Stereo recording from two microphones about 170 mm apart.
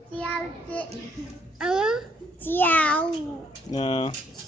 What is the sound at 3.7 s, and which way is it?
Speech, 30° left (ahead or behind).